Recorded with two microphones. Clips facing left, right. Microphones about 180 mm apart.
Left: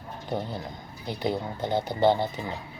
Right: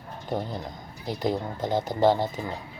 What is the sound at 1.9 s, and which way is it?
Speech, centre (ahead or behind).